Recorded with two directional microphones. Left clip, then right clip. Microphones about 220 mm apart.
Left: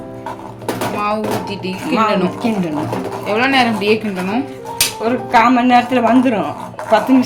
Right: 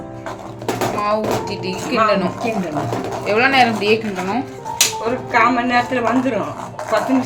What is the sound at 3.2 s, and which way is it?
Speech, centre (ahead or behind).